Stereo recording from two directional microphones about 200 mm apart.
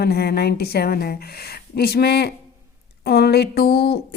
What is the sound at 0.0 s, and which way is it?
A woman's voice, 50° left (ahead or behind).